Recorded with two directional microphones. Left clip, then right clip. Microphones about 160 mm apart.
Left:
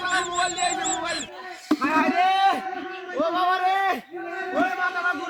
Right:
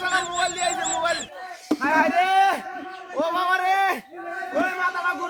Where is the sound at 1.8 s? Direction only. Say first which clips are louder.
Right 2 dB; 40° right (ahead or behind).